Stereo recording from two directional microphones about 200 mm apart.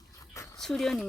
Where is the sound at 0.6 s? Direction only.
Centre (ahead or behind).